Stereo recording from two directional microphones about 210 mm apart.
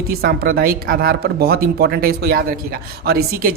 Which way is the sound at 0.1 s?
45° right (ahead or behind).